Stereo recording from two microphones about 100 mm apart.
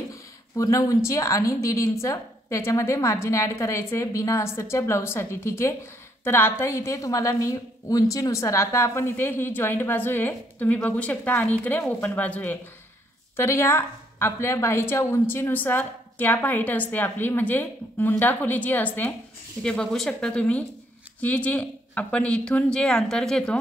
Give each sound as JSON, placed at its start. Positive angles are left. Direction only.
{"t": 0.1, "sound": "a woman's voice", "side_deg": 35}
{"t": 13.4, "sound": "a woman's voice", "side_deg": 25}